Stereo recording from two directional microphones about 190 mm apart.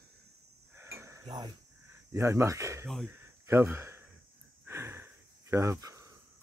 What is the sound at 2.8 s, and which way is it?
Speech, centre (ahead or behind).